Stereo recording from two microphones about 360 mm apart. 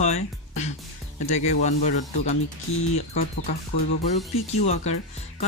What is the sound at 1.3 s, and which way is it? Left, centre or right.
Speech, centre.